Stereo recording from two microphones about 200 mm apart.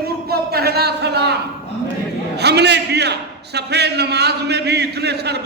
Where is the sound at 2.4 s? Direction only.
55° right (ahead or behind).